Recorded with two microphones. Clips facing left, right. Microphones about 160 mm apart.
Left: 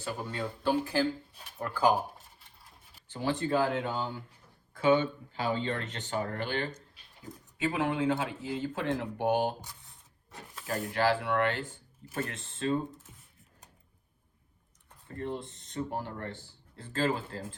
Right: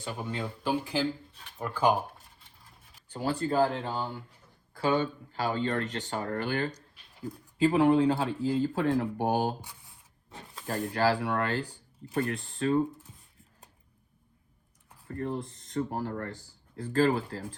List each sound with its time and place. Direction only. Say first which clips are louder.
0.0 s speech: even; 20° right (ahead or behind)
3.1 s speech: even; 40° right (ahead or behind)
10.7 s speech: right 1 dB; 40° right (ahead or behind)
15.4 s speech: left 1 dB; 25° left (ahead or behind)
16.0 s speech: right 4 dB; 45° right (ahead or behind)